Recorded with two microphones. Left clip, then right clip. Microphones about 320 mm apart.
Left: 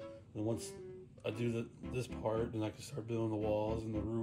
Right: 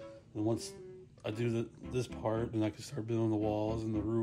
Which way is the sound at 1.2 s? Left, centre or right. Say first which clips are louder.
Right 3 dB; right.